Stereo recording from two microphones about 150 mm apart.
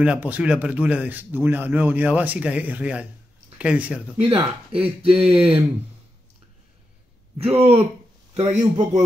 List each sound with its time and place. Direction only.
0.0 s a man's voice: 10° right (ahead or behind)
4.2 s speech: 40° right (ahead or behind)
5.2 s speech: centre (ahead or behind)
7.3 s a man's voice: 40° right (ahead or behind)